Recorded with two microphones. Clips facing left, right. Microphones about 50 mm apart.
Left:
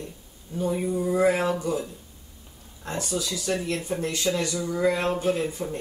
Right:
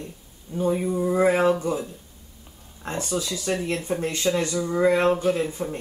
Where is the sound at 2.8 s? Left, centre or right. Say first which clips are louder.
Right 2 dB; right.